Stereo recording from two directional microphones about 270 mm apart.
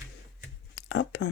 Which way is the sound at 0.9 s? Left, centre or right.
Left.